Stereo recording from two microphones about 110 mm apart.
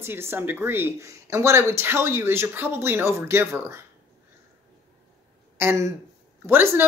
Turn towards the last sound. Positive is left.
turn(degrees=-20)  # may be behind; listen again after turning